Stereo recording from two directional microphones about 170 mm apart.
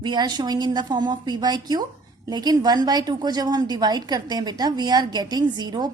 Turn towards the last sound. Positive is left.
turn(degrees=-25)  # may be behind; listen again after turning